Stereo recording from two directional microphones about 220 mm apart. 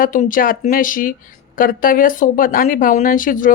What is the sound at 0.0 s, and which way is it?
Speech, 35° left (ahead or behind).